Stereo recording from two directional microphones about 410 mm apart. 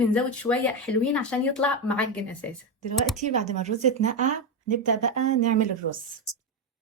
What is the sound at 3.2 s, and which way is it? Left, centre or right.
Speech, centre.